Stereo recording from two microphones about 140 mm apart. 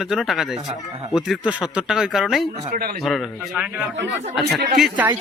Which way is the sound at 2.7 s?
90° right.